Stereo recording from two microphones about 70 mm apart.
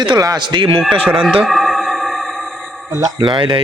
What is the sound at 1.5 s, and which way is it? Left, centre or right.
Music, centre.